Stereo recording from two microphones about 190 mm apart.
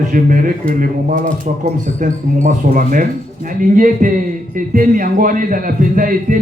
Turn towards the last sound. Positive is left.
turn(degrees=-45)  # may be behind; listen again after turning